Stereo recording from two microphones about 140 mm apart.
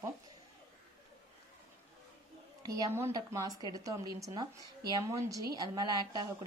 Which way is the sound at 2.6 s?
25° right (ahead or behind).